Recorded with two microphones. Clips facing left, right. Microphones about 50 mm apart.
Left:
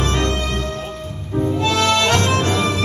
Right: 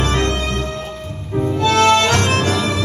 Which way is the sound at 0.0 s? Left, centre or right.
Right.